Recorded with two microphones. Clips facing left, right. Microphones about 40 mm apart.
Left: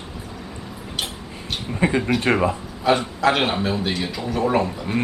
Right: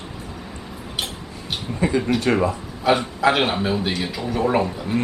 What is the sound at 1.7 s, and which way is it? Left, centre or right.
Speech, left.